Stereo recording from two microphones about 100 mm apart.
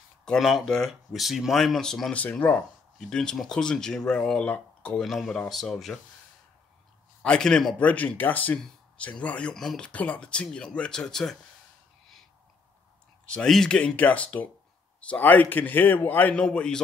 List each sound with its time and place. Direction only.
0.2 s speech: 5° left (ahead or behind)
7.2 s speech: 5° left (ahead or behind)
13.3 s speech: 5° left (ahead or behind)